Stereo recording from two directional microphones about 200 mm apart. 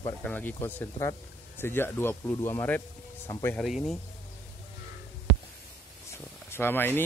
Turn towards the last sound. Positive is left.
turn(degrees=10)  # may be behind; listen again after turning